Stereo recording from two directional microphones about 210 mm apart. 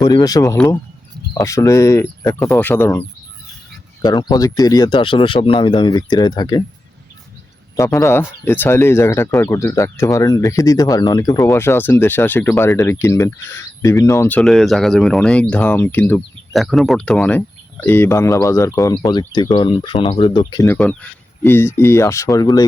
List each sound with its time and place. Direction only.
0.0 s speech: 15° left (ahead or behind)
4.0 s speech: 20° left (ahead or behind)
7.8 s speech: 15° left (ahead or behind)
20.7 s speech: 5° left (ahead or behind)